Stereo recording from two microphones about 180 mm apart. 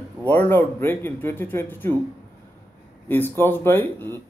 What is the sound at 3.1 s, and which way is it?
A man's voice, 10° left (ahead or behind).